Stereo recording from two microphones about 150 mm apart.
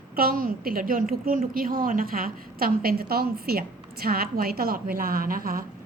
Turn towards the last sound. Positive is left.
turn(degrees=-75)  # may be behind; listen again after turning